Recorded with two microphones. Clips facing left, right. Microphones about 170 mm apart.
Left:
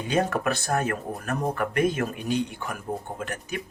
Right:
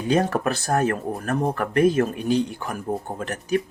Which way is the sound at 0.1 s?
35° right (ahead or behind).